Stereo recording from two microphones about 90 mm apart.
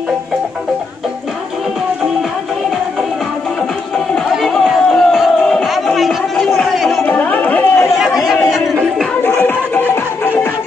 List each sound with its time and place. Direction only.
4.1 s crowd: 5° left (ahead or behind)
7.1 s music: 15° left (ahead or behind)
8.0 s chatter: 5° right (ahead or behind)
8.5 s music: 5° right (ahead or behind)
9.2 s music: 20° left (ahead or behind)